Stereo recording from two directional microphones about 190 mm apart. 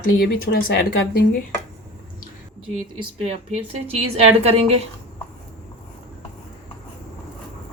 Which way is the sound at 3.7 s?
30° right (ahead or behind).